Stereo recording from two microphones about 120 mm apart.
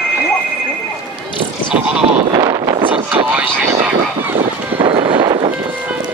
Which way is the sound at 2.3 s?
30° right (ahead or behind).